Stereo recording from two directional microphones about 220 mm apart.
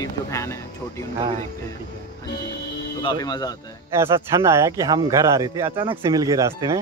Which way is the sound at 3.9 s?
10° right (ahead or behind).